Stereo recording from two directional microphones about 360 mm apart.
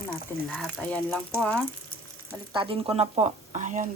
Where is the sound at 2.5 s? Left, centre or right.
Centre.